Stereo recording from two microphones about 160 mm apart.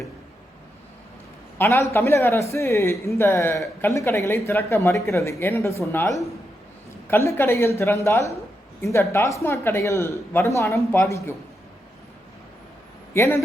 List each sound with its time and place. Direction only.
1.5 s a woman's voice: 15° left (ahead or behind)
13.1 s speech: 15° left (ahead or behind)